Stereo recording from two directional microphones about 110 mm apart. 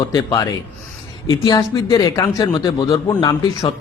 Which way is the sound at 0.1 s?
40° left (ahead or behind).